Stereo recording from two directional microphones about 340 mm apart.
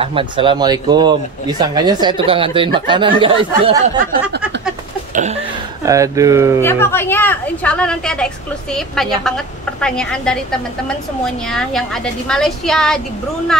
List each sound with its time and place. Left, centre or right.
0.0 s speech: centre
5.1 s a sound: centre
5.9 s speech: centre
6.6 s a woman's voice: centre
11.4 s a woman's voice: centre